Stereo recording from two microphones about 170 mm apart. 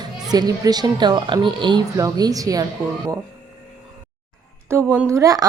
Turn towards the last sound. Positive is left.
turn(degrees=-20)  # may be behind; listen again after turning